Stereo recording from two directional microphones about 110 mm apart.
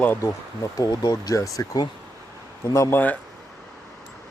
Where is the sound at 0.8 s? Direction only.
35° left (ahead or behind).